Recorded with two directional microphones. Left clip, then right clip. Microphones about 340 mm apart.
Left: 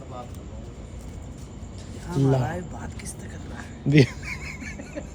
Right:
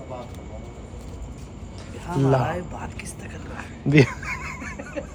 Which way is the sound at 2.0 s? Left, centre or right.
Centre.